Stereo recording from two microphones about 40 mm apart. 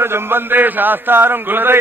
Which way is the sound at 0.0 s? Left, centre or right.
Right.